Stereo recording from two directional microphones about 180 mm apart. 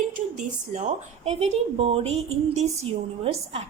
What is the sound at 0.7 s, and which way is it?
A woman's voice, 40° right (ahead or behind).